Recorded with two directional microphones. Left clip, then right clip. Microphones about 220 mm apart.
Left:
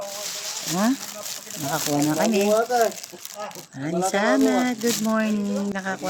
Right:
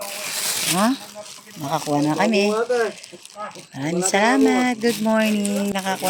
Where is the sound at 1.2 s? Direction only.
50° left (ahead or behind).